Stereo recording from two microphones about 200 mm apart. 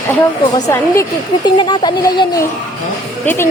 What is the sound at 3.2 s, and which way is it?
Speech, 10° left (ahead or behind).